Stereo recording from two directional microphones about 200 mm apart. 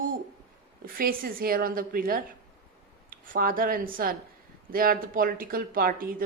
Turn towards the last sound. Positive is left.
turn(degrees=-45)  # may be behind; listen again after turning